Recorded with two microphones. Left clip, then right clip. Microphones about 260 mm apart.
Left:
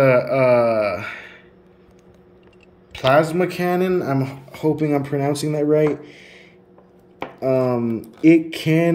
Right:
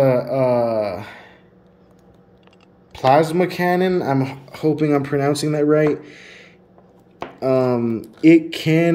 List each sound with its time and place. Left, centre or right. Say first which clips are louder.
0.1 s speech: left 2 dB; right
0.5 s a sound: left 3 dB; centre
0.8 s gasp: left 3 dB; right
3.0 s speech: right 1 dB; right
3.5 s speech: right 2 dB; centre
7.3 s speech: right 1 dB; centre